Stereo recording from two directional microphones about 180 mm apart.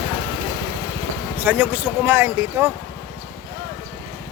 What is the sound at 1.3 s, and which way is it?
Speech, 10° right (ahead or behind).